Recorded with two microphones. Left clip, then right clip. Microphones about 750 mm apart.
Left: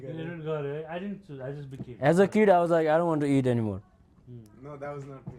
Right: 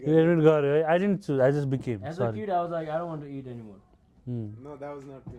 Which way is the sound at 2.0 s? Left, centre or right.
Left.